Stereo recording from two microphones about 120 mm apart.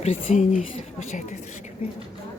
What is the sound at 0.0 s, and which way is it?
Speech, 80° left.